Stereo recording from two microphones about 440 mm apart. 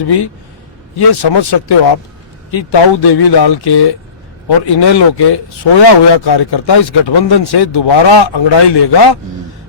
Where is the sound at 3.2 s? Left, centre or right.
Left.